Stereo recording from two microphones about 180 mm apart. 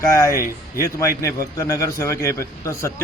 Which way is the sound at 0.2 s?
15° left (ahead or behind).